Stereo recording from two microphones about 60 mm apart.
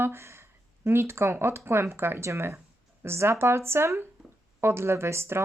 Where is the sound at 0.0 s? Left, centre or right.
Right.